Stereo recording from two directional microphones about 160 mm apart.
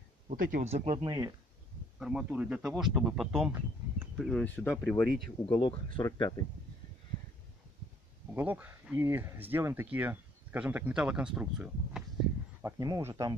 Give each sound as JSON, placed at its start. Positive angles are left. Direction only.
{"t": 0.3, "sound": "speech", "side_deg": -60}
{"t": 0.7, "sound": "speech", "side_deg": -40}
{"t": 1.0, "sound": "speech", "side_deg": -20}
{"t": 2.0, "sound": "speech", "side_deg": -5}
{"t": 4.3, "sound": "speech", "side_deg": 10}
{"t": 5.6, "sound": "speech", "side_deg": 30}
{"t": 8.4, "sound": "speech", "side_deg": -10}
{"t": 12.6, "sound": "speech", "side_deg": -20}